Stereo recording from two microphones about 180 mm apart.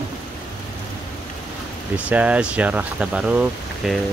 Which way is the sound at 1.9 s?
5° right (ahead or behind).